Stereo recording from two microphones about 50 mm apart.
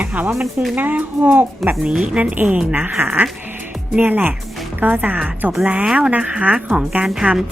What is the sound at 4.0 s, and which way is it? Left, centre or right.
A woman's voice, right.